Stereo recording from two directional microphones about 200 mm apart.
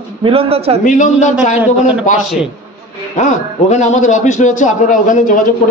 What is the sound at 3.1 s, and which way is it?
A man's voice, 35° left (ahead or behind).